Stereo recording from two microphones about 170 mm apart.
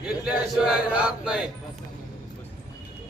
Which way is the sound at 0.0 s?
5° right (ahead or behind).